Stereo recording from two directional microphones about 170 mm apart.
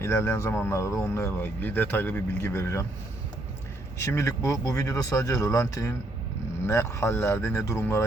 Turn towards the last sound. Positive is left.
turn(degrees=15)  # may be behind; listen again after turning